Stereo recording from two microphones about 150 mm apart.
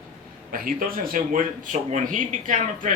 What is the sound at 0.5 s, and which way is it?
A man's voice, 75° right (ahead or behind).